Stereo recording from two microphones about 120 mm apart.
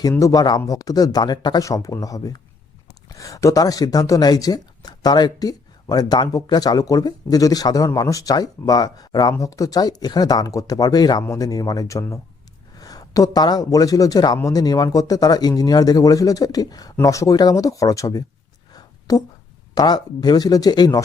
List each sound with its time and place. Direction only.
0.1 s a man's voice: 30° left (ahead or behind)
18.7 s a sound: 30° left (ahead or behind)
19.7 s speech: 35° left (ahead or behind)